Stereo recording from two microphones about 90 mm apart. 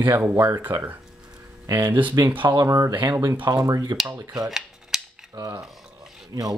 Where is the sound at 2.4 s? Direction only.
55° right (ahead or behind).